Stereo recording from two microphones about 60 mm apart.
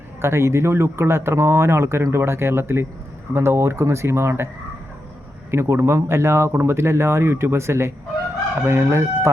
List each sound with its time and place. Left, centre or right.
0.2 s speech: right
5.5 s speech: right